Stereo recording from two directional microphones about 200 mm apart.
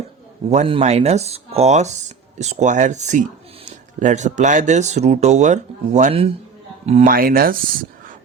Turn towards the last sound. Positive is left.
turn(degrees=-45)  # may be behind; listen again after turning